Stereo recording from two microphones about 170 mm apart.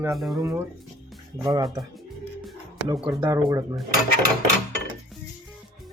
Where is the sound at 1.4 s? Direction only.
25° right (ahead or behind).